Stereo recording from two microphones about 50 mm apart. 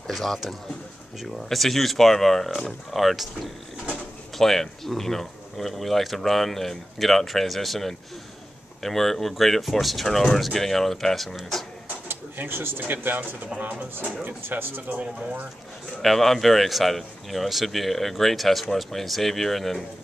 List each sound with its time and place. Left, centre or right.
0.1 s speech: centre
12.1 s speech: right
16.0 s speech: centre